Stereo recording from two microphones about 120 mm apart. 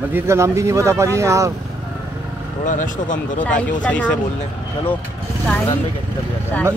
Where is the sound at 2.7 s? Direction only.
90° left.